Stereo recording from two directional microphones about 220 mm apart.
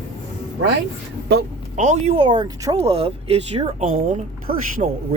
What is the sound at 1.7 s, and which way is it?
Speech, 30° right (ahead or behind).